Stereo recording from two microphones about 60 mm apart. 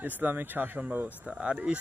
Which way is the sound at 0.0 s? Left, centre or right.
Right.